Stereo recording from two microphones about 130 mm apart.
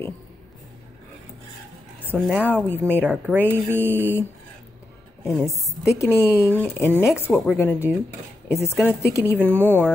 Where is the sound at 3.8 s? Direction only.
15° left (ahead or behind).